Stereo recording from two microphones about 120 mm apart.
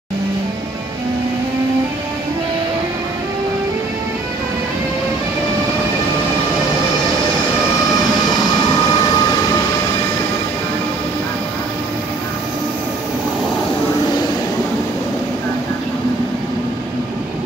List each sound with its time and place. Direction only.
8.5 s train: 30° left (ahead or behind)